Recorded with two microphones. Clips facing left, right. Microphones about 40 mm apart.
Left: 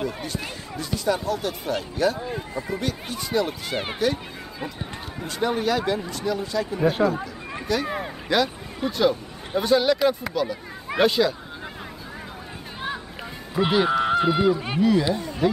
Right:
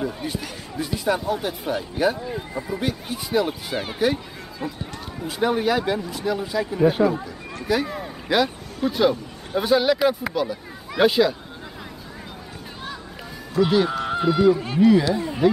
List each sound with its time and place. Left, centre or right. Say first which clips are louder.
0.0 s a sound: right 2 dB; centre
0.7 s speech: right 2 dB; centre
5.2 s speech: right 3 dB; centre
8.8 s speech: right 3 dB; centre
9.6 s speech: right 1 dB; centre
13.6 s honk: right 2 dB; left
13.9 s speech: left 1 dB; left
14.8 s speech: right 4 dB; centre